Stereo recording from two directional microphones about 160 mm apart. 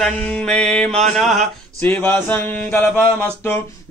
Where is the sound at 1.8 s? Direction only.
10° left (ahead or behind).